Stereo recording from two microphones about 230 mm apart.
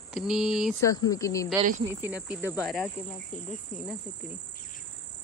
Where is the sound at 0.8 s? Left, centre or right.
Centre.